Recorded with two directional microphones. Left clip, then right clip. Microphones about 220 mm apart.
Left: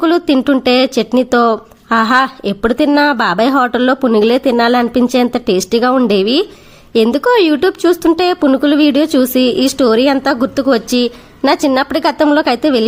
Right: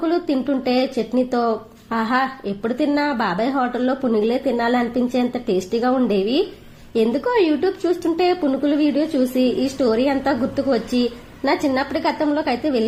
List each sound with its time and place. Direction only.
0.0 s speech: 35° left (ahead or behind)